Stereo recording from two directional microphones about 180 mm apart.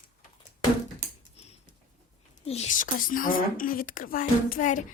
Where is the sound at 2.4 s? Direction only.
40° left (ahead or behind).